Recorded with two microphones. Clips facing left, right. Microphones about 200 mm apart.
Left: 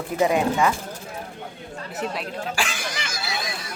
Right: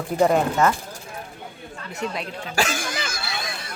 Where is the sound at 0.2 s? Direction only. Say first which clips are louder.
Right 1 dB; centre (ahead or behind).